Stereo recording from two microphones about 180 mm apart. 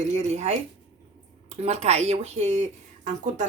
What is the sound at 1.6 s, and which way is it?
Speech, 35° right (ahead or behind).